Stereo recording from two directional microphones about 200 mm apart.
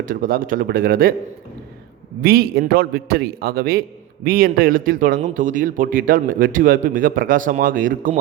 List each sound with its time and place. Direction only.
0.1 s a man's voice: 45° right (ahead or behind)
2.2 s a man's voice: 50° right (ahead or behind)